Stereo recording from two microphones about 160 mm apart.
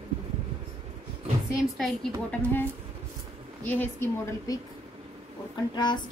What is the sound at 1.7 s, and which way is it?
A woman's voice, centre (ahead or behind).